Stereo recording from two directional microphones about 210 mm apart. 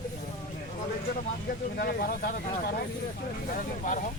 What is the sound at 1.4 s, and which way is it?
Speech, 45° left (ahead or behind).